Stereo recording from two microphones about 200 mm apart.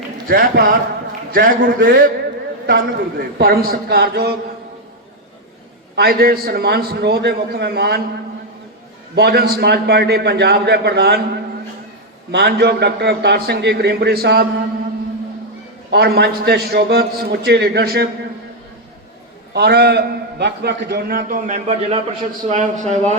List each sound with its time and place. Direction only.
0.3 s a man's voice: 45° right (ahead or behind)
6.0 s a man's voice: 50° right (ahead or behind)
9.1 s a man's voice: 55° right (ahead or behind)
12.3 s a man's voice: 55° right (ahead or behind)
15.9 s a man's voice: 55° right (ahead or behind)
19.5 s a man's voice: 55° right (ahead or behind); by 23.1 s 35° right (ahead or behind)